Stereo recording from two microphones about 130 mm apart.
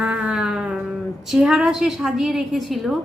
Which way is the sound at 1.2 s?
5° right (ahead or behind).